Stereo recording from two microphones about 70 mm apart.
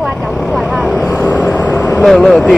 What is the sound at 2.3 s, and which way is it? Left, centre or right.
Speech, centre.